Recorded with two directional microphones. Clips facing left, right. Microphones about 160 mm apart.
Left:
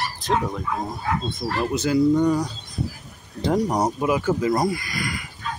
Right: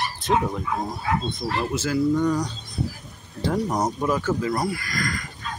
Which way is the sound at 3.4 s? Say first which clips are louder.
Left 3 dB; 15° left (ahead or behind).